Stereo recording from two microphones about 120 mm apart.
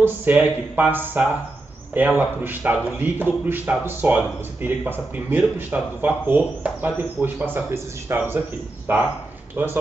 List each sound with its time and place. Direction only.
0.0 s a man's voice: 15° right (ahead or behind)